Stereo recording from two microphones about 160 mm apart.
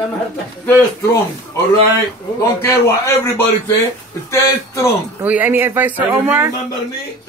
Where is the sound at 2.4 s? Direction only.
15° left (ahead or behind).